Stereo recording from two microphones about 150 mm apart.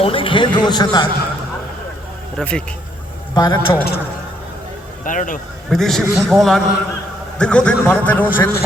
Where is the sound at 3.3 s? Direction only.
25° left (ahead or behind).